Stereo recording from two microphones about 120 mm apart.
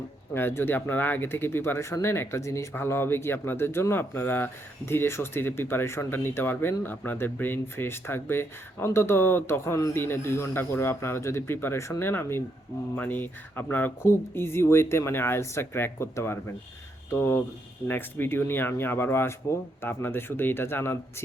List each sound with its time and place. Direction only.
0.3 s speech: 20° left (ahead or behind)